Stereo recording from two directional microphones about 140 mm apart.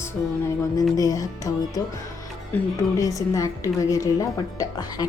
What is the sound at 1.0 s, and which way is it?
Speech, 25° left (ahead or behind).